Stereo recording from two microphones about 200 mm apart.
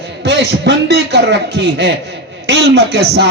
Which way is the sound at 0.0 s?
55° right (ahead or behind).